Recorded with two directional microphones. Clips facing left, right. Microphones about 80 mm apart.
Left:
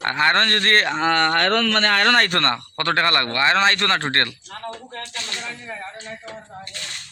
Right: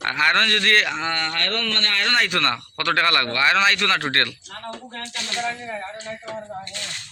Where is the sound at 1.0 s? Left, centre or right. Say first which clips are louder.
Left 7 dB; left.